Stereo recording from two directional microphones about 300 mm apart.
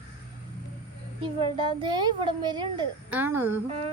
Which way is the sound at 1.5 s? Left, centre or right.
Centre.